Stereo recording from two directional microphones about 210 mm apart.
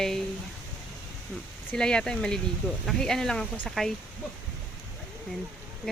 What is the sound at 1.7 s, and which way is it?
Speech, 5° left (ahead or behind).